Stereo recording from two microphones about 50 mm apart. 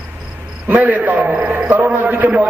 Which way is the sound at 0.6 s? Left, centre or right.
Right.